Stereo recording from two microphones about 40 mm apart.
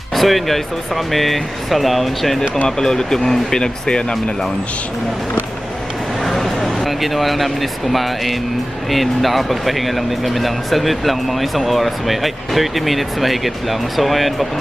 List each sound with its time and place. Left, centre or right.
0.1 s speech: centre
2.6 s speech: centre
3.6 s speech: left
6.2 s speech: centre